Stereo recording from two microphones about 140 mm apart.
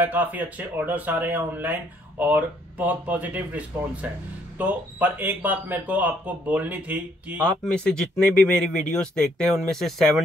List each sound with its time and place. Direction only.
0.0 s speech: 10° right (ahead or behind)
7.4 s speech: 5° left (ahead or behind)